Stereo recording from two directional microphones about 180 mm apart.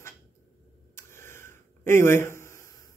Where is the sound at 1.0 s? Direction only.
15° left (ahead or behind).